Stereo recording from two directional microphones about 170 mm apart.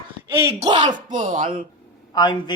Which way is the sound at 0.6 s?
25° right (ahead or behind).